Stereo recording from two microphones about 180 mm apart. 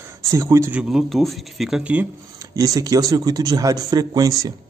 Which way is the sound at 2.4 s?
20° right (ahead or behind).